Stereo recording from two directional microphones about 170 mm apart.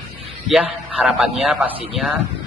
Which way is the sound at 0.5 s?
Centre (ahead or behind).